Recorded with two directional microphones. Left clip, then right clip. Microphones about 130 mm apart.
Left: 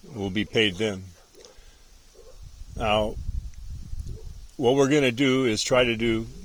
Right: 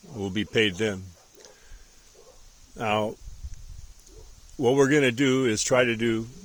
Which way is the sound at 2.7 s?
15° right (ahead or behind).